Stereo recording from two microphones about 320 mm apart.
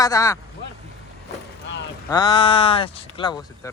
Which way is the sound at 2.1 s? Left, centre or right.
Centre.